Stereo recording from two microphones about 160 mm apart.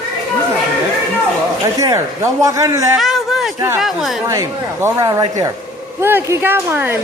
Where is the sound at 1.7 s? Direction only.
20° right (ahead or behind).